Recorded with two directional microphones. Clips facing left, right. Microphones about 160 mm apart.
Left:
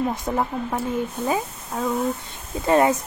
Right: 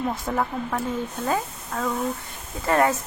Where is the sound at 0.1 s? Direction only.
20° left (ahead or behind).